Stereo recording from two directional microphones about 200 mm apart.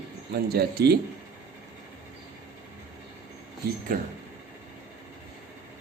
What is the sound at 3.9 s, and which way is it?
Speech, 45° right (ahead or behind).